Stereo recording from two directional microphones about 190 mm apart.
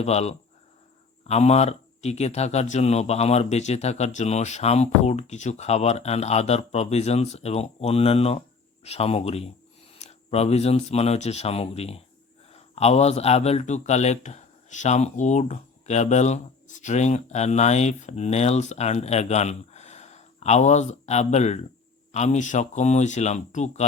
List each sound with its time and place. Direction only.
0.0 s speech: 35° left (ahead or behind)